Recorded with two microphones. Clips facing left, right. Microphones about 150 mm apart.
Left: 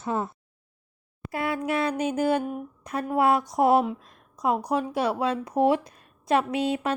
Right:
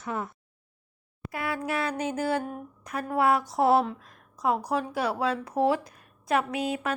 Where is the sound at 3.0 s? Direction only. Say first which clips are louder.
Left 2 dB; 20° left (ahead or behind).